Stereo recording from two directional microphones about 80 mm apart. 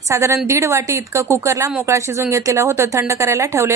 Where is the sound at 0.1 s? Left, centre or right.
Right.